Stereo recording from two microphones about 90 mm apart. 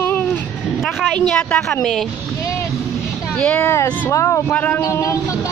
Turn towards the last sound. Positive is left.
turn(degrees=35)  # may be behind; listen again after turning